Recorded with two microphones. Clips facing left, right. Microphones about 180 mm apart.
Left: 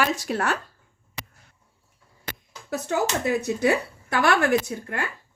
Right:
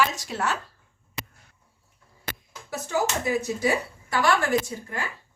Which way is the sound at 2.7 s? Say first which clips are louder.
Left 2 dB; 65° left (ahead or behind).